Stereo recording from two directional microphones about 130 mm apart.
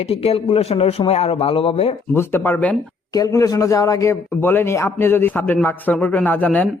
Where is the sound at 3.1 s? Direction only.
25° left (ahead or behind).